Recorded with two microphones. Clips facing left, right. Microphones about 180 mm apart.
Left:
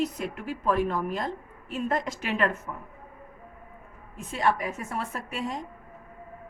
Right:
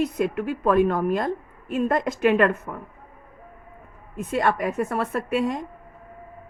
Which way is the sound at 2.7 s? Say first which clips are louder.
Right 4 dB; 75° right (ahead or behind).